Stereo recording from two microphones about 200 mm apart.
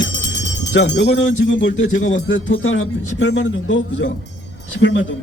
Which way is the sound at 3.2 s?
70° left (ahead or behind).